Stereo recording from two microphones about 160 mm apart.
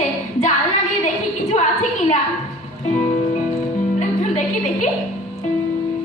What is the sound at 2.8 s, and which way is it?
Music, 50° left (ahead or behind).